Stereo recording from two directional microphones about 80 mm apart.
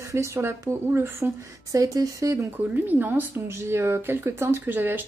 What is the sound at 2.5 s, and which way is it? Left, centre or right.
Speech, right.